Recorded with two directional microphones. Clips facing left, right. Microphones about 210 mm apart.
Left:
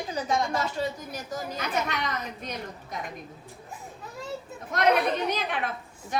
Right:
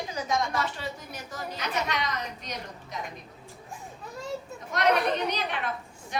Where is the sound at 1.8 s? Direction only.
50° left (ahead or behind).